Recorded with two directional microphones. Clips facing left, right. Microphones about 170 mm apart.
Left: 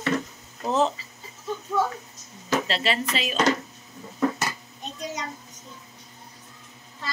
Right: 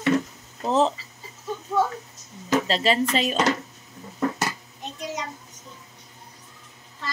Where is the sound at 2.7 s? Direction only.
40° right (ahead or behind).